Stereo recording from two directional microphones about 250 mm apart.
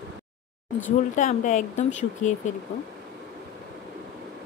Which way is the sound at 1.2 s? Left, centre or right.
Left.